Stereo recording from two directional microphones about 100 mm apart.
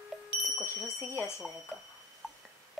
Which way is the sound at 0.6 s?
25° left (ahead or behind).